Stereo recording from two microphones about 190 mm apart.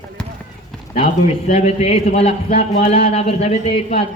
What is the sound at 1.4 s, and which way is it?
A man's voice, 35° left (ahead or behind).